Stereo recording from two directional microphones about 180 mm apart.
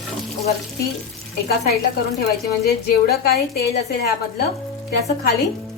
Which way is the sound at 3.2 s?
60° left (ahead or behind).